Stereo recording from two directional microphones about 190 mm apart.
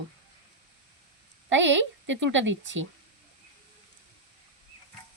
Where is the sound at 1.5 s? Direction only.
75° right (ahead or behind).